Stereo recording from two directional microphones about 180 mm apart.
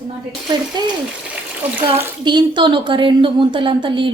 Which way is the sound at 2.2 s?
25° right (ahead or behind).